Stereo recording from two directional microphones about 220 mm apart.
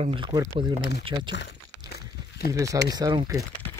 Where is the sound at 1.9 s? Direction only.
45° left (ahead or behind).